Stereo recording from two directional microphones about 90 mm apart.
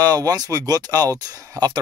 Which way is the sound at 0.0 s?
45° right (ahead or behind).